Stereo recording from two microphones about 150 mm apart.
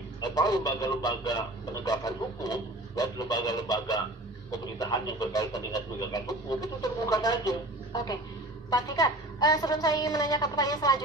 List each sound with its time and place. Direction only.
0.2 s a man's voice: 25° left (ahead or behind)